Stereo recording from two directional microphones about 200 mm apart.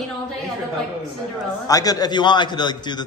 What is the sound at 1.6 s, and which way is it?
A man's voice, 20° left (ahead or behind).